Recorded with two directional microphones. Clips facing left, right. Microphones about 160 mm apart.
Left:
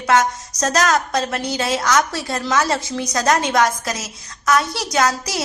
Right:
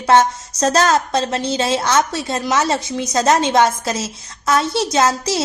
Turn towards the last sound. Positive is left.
turn(degrees=-25)  # may be behind; listen again after turning